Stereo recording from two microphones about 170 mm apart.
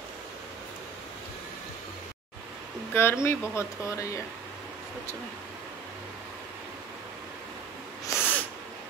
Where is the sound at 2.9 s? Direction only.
15° left (ahead or behind).